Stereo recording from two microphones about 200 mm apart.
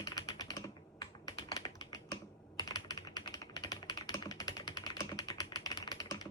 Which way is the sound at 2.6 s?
20° left (ahead or behind).